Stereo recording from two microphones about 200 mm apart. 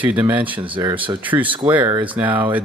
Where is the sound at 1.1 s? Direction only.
10° right (ahead or behind).